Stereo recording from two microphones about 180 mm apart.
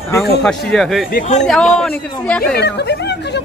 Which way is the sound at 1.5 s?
5° left (ahead or behind).